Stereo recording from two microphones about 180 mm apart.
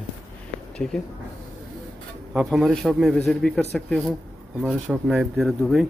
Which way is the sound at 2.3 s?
Centre (ahead or behind).